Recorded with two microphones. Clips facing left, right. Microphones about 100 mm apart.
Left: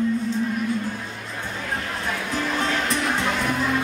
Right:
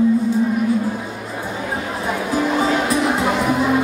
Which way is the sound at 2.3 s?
10° right (ahead or behind).